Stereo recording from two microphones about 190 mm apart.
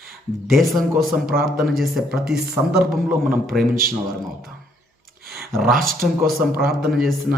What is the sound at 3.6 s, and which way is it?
Speech, 50° right (ahead or behind).